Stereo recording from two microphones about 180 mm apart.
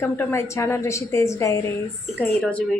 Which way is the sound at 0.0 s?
15° left (ahead or behind).